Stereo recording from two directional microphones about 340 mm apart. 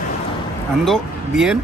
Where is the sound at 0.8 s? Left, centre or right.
Centre.